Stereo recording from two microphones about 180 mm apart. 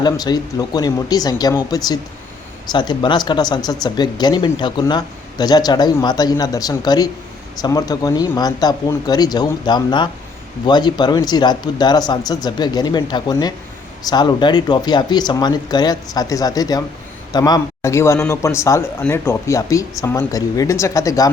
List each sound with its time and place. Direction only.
0.0 s a man's voice: 20° left (ahead or behind)